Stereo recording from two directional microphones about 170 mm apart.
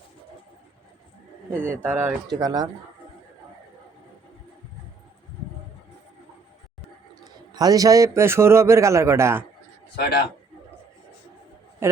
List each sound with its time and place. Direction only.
1.8 s speech: 15° right (ahead or behind)
7.5 s a man's voice: 20° right (ahead or behind)
9.9 s a man's voice: 70° left (ahead or behind)
11.8 s a man's voice: 15° right (ahead or behind)